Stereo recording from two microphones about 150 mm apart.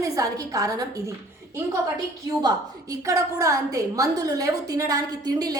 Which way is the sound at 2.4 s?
25° right (ahead or behind).